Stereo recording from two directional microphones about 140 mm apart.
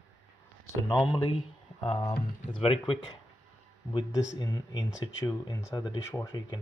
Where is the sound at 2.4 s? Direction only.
40° left (ahead or behind).